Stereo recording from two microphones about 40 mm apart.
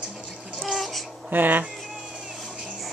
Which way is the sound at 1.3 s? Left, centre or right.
Right.